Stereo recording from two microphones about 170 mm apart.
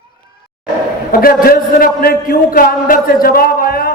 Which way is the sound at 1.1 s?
60° left (ahead or behind).